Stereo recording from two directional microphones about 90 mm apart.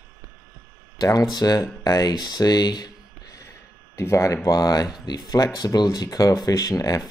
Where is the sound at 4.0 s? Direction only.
30° left (ahead or behind).